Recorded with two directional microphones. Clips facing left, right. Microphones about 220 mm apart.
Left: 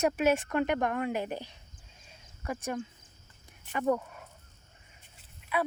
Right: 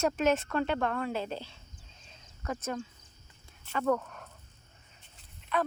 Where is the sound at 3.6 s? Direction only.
15° left (ahead or behind).